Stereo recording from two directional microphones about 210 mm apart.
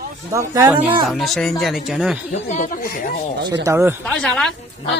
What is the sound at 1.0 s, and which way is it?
Speech, centre (ahead or behind).